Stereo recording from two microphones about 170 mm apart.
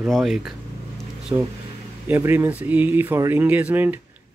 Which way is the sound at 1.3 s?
20° right (ahead or behind).